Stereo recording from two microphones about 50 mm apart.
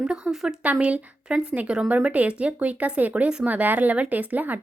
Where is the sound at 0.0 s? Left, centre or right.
Centre.